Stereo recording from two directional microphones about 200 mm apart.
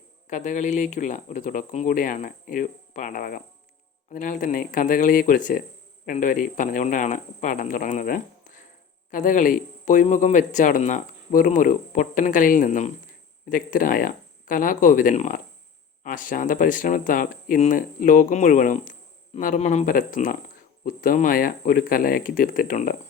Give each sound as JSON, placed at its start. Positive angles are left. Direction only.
{"t": 0.3, "sound": "speech", "side_deg": 35}